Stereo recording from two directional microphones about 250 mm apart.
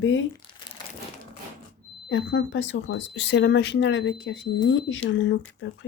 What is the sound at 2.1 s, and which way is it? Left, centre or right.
Speech, left.